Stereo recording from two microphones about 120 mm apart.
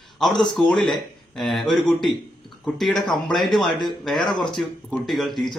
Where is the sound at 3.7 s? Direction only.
40° left (ahead or behind).